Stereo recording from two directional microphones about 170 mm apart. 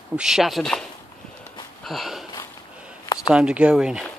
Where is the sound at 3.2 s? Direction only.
5° right (ahead or behind).